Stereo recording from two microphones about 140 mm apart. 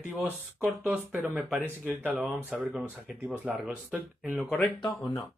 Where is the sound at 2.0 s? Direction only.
10° right (ahead or behind).